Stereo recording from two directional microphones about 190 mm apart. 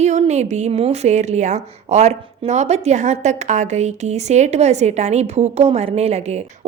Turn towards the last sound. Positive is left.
turn(degrees=-35)  # may be behind; listen again after turning